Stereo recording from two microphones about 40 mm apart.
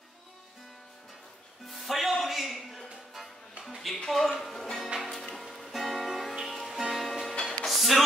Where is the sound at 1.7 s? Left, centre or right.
Centre.